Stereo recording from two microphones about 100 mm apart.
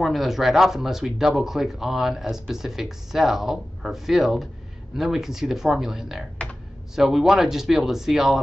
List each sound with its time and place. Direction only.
0.0 s speech: centre (ahead or behind)